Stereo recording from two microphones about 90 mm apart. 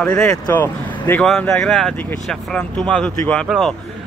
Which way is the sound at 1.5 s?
5° left (ahead or behind).